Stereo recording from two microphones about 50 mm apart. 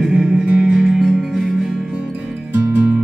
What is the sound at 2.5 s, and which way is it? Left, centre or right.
Music, right.